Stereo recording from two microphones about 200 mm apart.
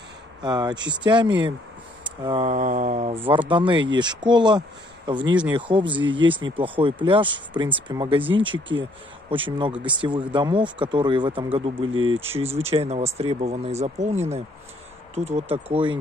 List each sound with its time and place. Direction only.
0.4 s speech: 20° right (ahead or behind)